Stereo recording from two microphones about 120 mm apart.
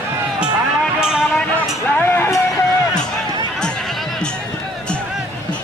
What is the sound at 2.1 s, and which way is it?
Music, 25° left (ahead or behind).